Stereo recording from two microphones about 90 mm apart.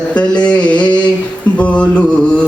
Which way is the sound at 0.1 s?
15° left (ahead or behind).